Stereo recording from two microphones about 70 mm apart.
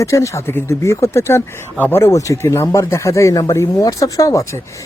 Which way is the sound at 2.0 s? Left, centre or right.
Left.